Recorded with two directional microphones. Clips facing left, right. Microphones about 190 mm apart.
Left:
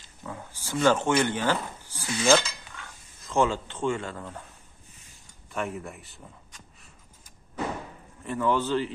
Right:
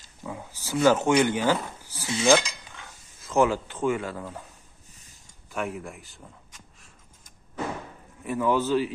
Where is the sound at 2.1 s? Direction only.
25° right (ahead or behind).